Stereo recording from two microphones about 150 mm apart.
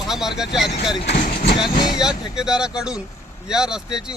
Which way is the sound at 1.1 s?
90° left.